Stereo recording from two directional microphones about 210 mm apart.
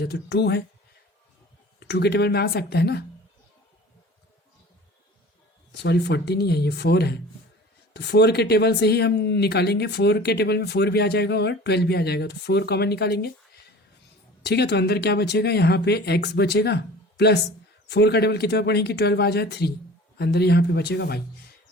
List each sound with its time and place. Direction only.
0.0 s speech: 50° left (ahead or behind)
1.8 s speech: 50° left (ahead or behind)
5.7 s speech: 50° left (ahead or behind)
14.4 s speech: 50° left (ahead or behind)